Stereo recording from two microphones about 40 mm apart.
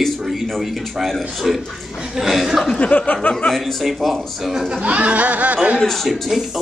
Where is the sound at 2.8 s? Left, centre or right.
Left.